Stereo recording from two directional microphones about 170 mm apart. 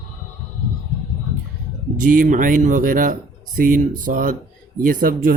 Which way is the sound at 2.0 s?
55° right (ahead or behind).